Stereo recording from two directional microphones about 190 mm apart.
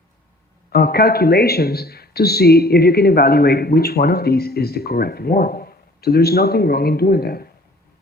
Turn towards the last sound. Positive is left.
turn(degrees=55)  # may be behind; listen again after turning